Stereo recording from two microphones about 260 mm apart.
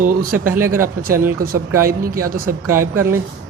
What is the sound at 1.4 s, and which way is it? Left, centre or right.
Speech, right.